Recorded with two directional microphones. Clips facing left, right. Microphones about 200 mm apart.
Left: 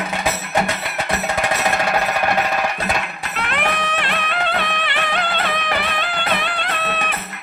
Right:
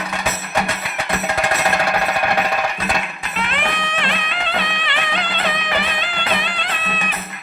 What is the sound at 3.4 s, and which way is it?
Music, 55° left (ahead or behind).